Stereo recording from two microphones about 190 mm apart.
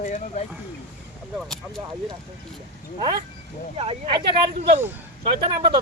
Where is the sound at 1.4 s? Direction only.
Centre (ahead or behind).